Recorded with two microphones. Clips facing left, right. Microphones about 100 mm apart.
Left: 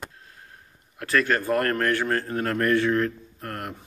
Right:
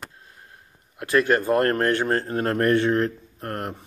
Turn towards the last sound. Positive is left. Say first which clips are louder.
# right 4 dB
turn(degrees=-30)  # may be behind; listen again after turning